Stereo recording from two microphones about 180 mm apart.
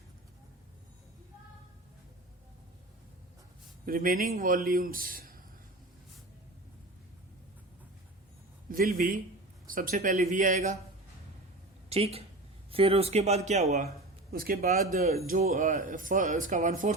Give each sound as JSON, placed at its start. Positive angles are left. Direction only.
{"t": 3.8, "sound": "speech", "side_deg": -50}
{"t": 8.7, "sound": "speech", "side_deg": -55}
{"t": 11.9, "sound": "speech", "side_deg": -35}
{"t": 14.3, "sound": "speech", "side_deg": -55}